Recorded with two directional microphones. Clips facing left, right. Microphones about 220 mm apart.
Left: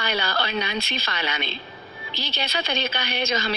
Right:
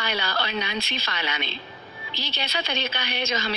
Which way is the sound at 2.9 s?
40° left (ahead or behind).